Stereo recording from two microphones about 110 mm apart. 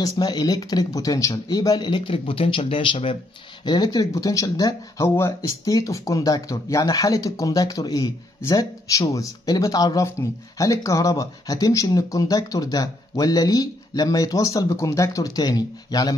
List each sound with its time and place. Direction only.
0.0 s speech: 35° left (ahead or behind)
1.9 s speech: 50° left (ahead or behind)
3.6 s speech: 40° left (ahead or behind)